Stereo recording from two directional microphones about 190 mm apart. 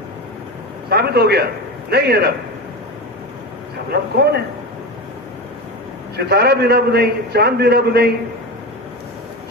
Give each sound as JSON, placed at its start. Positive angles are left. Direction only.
{"t": 0.8, "sound": "a man's voice", "side_deg": -55}
{"t": 3.9, "sound": "a man's voice", "side_deg": -55}
{"t": 6.1, "sound": "a man's voice", "side_deg": -60}